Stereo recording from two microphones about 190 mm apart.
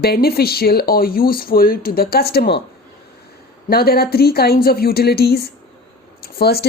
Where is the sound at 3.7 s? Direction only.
55° left (ahead or behind).